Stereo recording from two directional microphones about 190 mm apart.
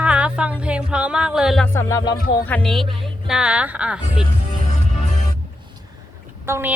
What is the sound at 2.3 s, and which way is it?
Speech, 10° left (ahead or behind).